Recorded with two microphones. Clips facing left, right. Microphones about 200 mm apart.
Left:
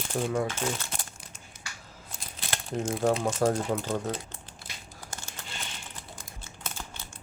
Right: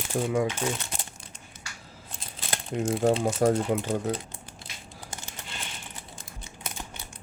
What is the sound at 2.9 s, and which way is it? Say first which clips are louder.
Speech: right 3 dB; 30° right (ahead or behind).